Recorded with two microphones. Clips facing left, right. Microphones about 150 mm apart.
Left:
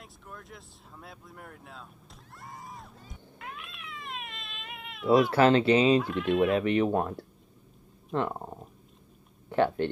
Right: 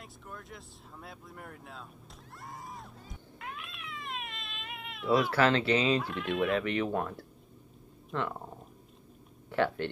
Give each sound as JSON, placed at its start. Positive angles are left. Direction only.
{"t": 0.0, "sound": "speech", "side_deg": 0}
{"t": 2.4, "sound": "a sound", "side_deg": 0}
{"t": 3.3, "sound": "cat", "side_deg": 0}
{"t": 5.3, "sound": "speech", "side_deg": 25}
{"t": 5.9, "sound": "speech", "side_deg": 0}
{"t": 6.5, "sound": "speech", "side_deg": 25}
{"t": 8.1, "sound": "speech", "side_deg": 40}
{"t": 9.5, "sound": "speech", "side_deg": 20}